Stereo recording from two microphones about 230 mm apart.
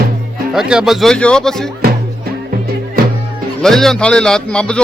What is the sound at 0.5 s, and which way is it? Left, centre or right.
A man's voice, centre.